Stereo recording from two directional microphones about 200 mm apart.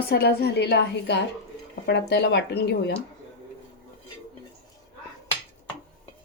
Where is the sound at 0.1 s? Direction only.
55° left (ahead or behind).